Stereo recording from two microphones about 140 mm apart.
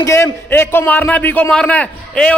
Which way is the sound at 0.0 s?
20° left (ahead or behind).